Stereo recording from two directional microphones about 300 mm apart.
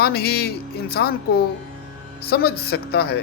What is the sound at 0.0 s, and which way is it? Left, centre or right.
Speech, left.